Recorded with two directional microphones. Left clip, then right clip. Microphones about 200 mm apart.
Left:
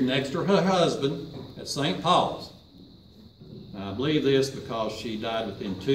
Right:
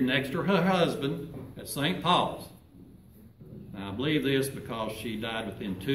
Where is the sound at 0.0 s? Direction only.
Centre (ahead or behind).